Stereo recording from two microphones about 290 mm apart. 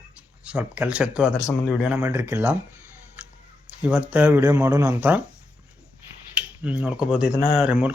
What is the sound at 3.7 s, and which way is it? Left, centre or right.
Speech, centre.